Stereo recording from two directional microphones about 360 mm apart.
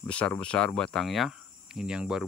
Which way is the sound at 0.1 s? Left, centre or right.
Centre.